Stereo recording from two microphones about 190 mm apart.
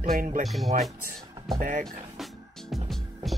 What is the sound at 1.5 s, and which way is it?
Speech, 40° right (ahead or behind).